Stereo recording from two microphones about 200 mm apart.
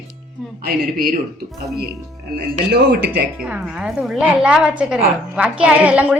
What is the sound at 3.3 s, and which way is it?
A woman's voice, 5° right (ahead or behind).